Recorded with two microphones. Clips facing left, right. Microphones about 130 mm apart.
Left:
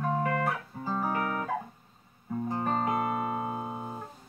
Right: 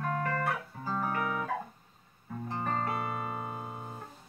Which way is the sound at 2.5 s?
15° left (ahead or behind).